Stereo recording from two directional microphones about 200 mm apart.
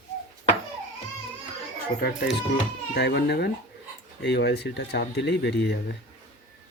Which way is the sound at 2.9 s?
55° left (ahead or behind).